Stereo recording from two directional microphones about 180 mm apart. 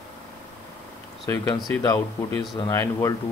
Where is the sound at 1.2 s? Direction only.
20° left (ahead or behind).